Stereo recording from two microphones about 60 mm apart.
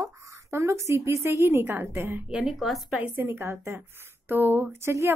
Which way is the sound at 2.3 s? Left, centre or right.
Centre.